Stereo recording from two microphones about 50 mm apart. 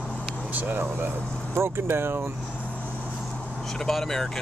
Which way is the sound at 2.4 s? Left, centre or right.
Left.